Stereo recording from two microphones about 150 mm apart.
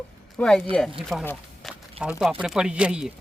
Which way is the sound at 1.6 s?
5° right (ahead or behind).